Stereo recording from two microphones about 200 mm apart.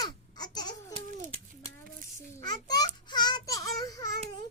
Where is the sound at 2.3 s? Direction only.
20° left (ahead or behind).